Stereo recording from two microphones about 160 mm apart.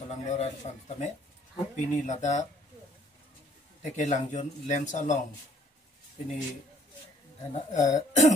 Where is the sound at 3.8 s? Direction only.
50° left (ahead or behind).